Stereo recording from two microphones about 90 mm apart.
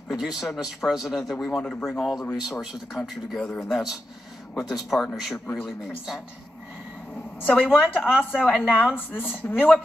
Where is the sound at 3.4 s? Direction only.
10° left (ahead or behind).